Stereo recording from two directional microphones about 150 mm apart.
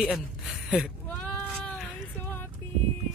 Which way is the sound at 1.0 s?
10° left (ahead or behind).